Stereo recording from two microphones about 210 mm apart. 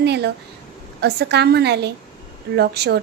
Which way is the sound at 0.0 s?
55° right (ahead or behind).